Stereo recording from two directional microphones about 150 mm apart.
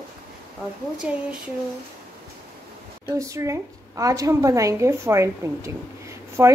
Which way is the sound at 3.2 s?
20° right (ahead or behind).